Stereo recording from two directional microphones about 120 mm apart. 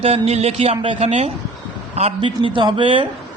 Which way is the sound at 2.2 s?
45° right (ahead or behind).